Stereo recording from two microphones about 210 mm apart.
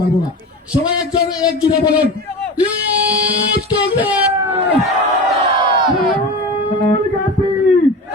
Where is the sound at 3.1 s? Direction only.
45° right (ahead or behind).